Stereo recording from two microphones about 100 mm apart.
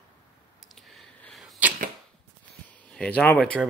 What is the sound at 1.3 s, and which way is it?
Arrow, centre (ahead or behind).